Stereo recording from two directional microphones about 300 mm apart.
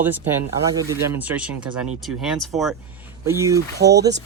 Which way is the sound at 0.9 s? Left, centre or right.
Centre.